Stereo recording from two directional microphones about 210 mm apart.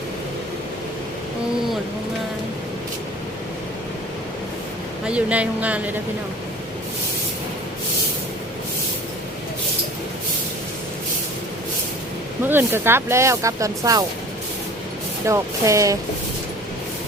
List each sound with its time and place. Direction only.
5.0 s speech: 5° right (ahead or behind)
12.5 s speech: 10° right (ahead or behind)
15.3 s speech: 15° right (ahead or behind)